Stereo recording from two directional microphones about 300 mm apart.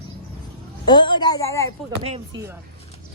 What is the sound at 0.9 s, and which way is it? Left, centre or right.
Speech, centre.